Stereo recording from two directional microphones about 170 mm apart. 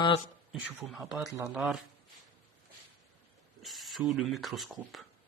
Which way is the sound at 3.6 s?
Centre (ahead or behind).